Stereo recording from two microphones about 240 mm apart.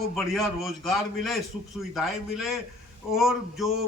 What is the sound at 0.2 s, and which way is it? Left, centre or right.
A man's voice, centre.